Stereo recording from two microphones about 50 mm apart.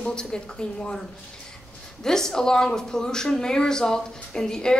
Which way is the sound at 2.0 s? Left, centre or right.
Centre.